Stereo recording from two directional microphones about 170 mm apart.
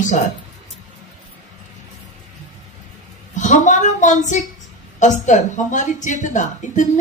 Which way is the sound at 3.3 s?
45° left (ahead or behind).